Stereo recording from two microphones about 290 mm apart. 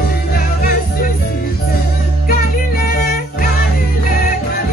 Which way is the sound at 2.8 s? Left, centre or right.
Left.